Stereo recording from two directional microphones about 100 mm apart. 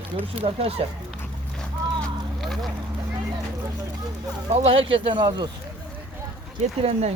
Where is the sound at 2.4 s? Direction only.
Centre (ahead or behind).